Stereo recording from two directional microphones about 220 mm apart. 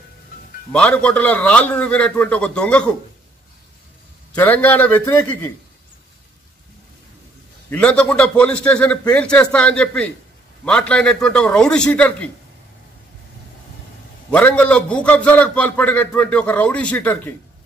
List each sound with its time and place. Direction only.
0.7 s a man's voice: 5° left (ahead or behind)
4.4 s a man's voice: 5° left (ahead or behind)
7.7 s a man's voice: 5° left (ahead or behind)
14.3 s a man's voice: 5° left (ahead or behind)